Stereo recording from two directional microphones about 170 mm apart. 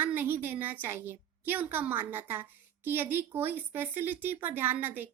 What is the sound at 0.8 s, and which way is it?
Speech, 10° right (ahead or behind).